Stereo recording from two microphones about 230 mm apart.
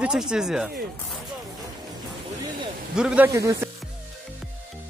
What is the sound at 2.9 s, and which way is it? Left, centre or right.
Speech, centre.